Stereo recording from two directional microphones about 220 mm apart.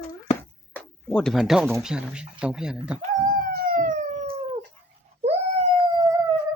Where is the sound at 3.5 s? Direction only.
40° right (ahead or behind).